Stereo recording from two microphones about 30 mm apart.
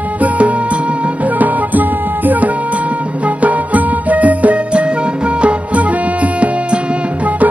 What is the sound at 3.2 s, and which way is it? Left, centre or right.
Music, right.